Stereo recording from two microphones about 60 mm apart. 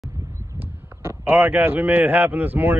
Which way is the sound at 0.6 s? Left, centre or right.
Right.